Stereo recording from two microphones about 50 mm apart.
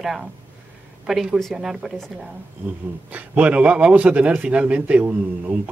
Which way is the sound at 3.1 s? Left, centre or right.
Right.